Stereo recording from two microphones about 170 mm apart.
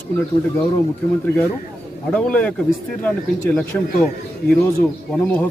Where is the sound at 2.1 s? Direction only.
10° left (ahead or behind).